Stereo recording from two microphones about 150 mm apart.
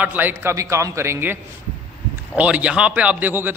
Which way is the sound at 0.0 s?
10° right (ahead or behind).